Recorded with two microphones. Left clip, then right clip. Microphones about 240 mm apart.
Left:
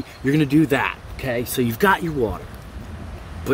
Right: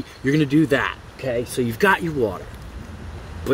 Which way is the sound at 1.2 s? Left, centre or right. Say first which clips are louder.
Even; left.